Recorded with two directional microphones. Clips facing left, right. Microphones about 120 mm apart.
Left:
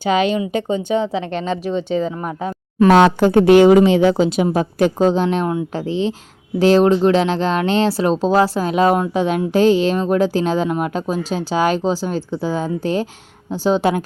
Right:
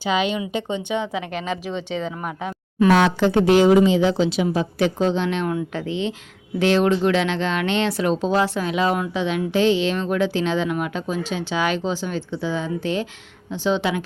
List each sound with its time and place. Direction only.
0.0 s speech: 45° left (ahead or behind)
1.3 s speech: 5° right (ahead or behind)
2.2 s a sound: 35° left (ahead or behind)
3.2 s a woman's voice: 50° left (ahead or behind)